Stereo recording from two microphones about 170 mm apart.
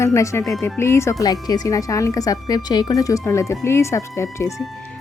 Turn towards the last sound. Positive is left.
turn(degrees=15)  # may be behind; listen again after turning